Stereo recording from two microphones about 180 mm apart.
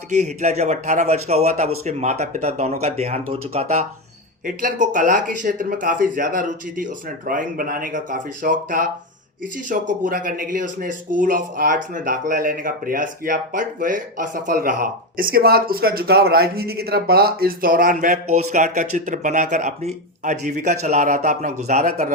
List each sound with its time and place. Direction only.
0.1 s speech: 40° right (ahead or behind)
4.4 s speech: 50° right (ahead or behind)